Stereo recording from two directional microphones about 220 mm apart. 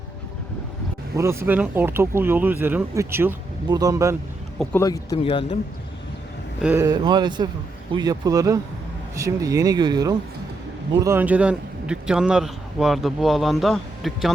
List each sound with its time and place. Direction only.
1.1 s speech: 10° right (ahead or behind)
4.6 s speech: 10° left (ahead or behind)
6.6 s speech: 5° right (ahead or behind)
6.8 s a man's voice: 20° right (ahead or behind); by 14.3 s centre (ahead or behind)